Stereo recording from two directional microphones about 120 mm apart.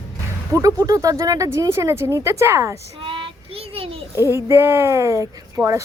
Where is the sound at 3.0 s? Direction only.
45° right (ahead or behind).